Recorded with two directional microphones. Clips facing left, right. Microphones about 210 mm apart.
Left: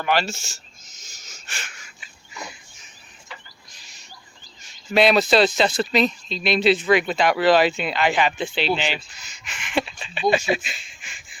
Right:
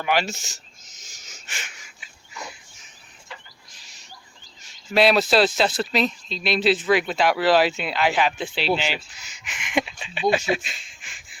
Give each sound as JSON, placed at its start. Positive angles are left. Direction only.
{"t": 0.0, "sound": "speech", "side_deg": -15}
{"t": 1.0, "sound": "wheeze", "side_deg": -15}
{"t": 4.6, "sound": "speech", "side_deg": -5}